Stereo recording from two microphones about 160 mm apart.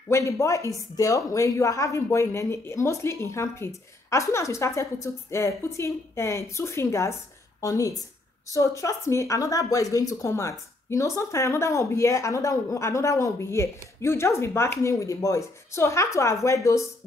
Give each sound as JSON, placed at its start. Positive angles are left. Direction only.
{"t": 0.1, "sound": "a woman's voice", "side_deg": 20}